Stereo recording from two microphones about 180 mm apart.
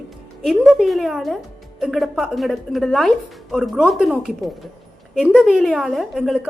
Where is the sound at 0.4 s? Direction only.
Centre (ahead or behind).